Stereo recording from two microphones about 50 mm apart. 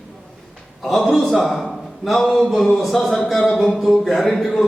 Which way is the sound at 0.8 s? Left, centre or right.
Centre.